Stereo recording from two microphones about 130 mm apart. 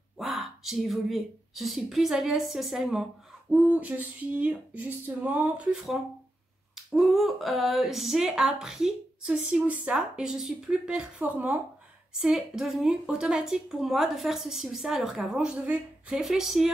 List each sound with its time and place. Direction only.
0.2 s a woman's voice: centre (ahead or behind)
3.5 s a sound: 10° right (ahead or behind)
6.7 s speech: 5° right (ahead or behind)